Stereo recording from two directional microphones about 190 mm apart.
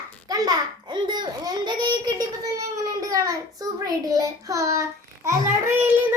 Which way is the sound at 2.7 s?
20° right (ahead or behind).